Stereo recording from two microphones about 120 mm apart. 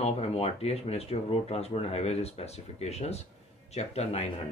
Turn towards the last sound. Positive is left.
turn(degrees=60)  # may be behind; listen again after turning